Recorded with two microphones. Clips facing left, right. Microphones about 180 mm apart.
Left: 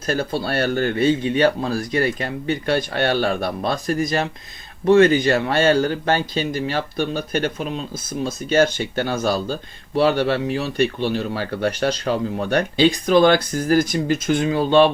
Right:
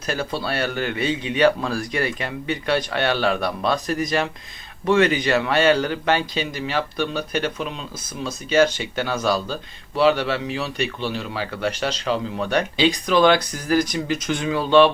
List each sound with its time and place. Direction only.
0.0 s a man's voice: 50° left (ahead or behind)